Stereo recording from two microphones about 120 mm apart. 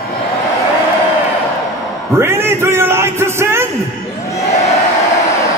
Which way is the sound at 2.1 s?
20° right (ahead or behind).